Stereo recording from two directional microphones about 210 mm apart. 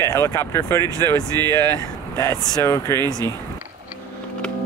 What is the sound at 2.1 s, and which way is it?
Speech, 15° left (ahead or behind).